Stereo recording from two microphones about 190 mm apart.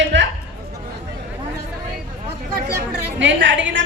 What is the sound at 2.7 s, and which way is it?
A woman's voice, 75° right (ahead or behind).